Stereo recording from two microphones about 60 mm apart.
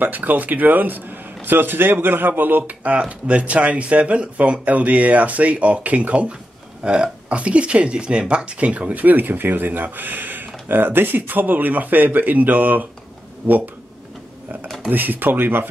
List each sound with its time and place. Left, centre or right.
0.0 s speech: right
14.9 s speech: right